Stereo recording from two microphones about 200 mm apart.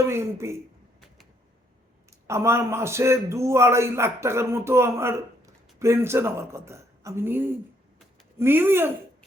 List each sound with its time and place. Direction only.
0.0 s a man's voice: 15° right (ahead or behind)
2.2 s a man's voice: 15° right (ahead or behind)